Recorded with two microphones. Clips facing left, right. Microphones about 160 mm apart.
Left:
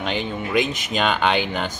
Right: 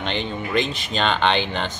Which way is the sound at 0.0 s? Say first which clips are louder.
Left 1 dB; 5° left (ahead or behind).